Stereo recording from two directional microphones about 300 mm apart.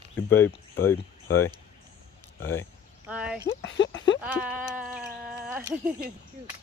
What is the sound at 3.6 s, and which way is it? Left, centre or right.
Speech, left.